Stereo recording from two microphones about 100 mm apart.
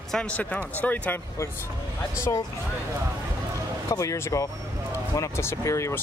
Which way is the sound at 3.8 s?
30° left (ahead or behind).